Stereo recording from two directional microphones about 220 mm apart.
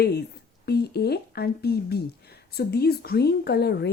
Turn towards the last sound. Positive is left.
turn(degrees=50)  # may be behind; listen again after turning